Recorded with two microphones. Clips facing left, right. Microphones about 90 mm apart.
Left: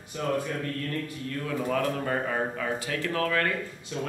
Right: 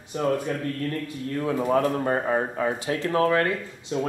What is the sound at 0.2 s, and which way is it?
Speech, 35° right (ahead or behind).